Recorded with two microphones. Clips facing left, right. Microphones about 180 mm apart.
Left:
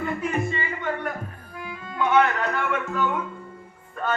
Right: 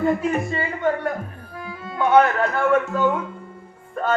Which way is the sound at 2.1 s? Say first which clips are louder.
Right 5 dB; 40° right (ahead or behind).